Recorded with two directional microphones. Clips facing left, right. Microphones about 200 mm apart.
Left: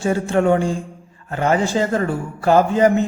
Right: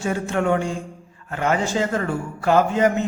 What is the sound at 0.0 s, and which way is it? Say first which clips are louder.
A man's voice: left 5 dB; 30° left (ahead or behind).